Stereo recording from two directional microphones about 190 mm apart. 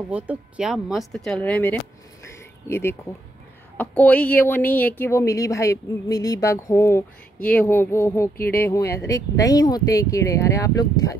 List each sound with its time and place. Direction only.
0.1 s speech: 5° right (ahead or behind); by 11.1 s 20° left (ahead or behind)